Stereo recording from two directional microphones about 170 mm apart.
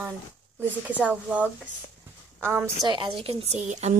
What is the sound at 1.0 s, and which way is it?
A woman's voice, 10° right (ahead or behind).